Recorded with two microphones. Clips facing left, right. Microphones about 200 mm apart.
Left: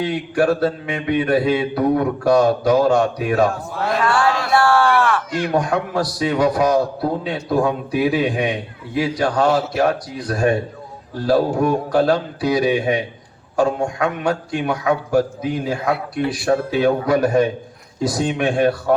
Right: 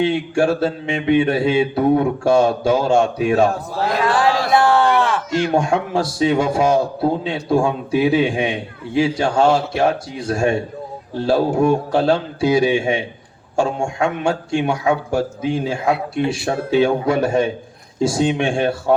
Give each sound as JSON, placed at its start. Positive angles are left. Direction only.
{"t": 0.0, "sound": "a man's voice", "side_deg": -25}